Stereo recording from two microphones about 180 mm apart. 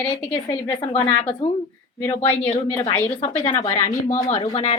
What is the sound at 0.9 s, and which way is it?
Speech, 35° left (ahead or behind).